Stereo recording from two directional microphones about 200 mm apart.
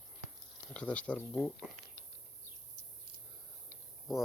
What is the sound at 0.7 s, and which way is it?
Speech, 5° left (ahead or behind).